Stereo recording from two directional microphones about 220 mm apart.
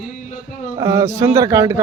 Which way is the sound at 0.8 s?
15° right (ahead or behind).